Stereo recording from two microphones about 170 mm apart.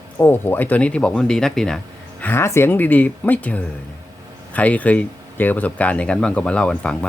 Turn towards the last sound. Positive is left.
turn(degrees=5)  # may be behind; listen again after turning